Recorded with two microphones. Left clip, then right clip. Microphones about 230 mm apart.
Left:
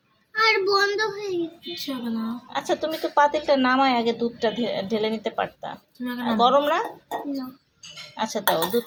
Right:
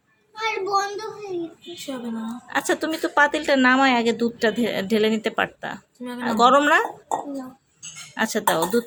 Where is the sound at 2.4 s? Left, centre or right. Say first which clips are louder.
Right 3 dB; right.